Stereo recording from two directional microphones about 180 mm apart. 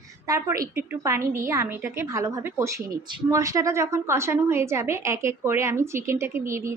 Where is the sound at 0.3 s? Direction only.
20° right (ahead or behind).